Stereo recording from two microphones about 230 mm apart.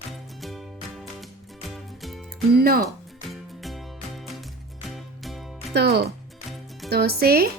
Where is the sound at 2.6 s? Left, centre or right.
Right.